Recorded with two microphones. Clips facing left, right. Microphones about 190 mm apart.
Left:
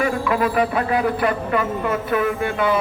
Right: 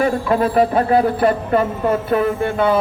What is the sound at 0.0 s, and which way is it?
Speech, 35° right (ahead or behind).